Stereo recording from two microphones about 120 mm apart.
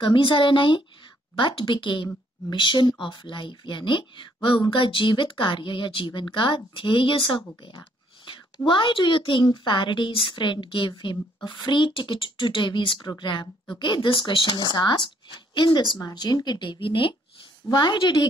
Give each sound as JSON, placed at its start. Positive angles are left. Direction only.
{"t": 0.0, "sound": "speech", "side_deg": 45}